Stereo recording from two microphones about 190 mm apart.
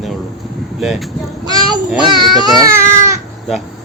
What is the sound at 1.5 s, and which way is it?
Speech, 20° right (ahead or behind).